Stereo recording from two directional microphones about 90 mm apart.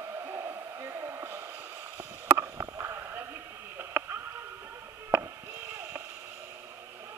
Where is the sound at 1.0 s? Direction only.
30° right (ahead or behind).